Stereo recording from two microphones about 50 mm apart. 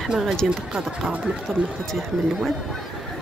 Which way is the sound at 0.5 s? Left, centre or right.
Right.